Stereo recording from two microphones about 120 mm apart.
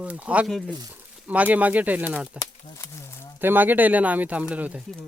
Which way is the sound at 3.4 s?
15° right (ahead or behind).